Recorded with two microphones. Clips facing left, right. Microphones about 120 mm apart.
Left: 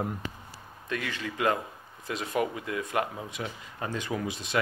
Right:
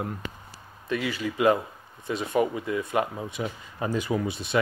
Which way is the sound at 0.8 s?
5° right (ahead or behind).